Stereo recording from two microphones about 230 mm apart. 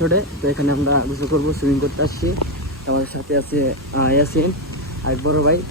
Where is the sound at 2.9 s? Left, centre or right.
Right.